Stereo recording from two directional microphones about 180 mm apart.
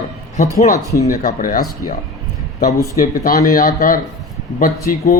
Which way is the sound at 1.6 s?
20° left (ahead or behind).